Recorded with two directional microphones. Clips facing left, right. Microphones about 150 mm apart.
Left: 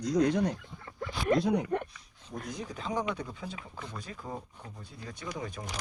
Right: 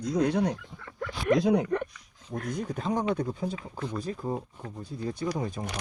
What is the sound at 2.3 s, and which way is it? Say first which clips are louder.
Speech: right 6 dB; 60° right (ahead or behind).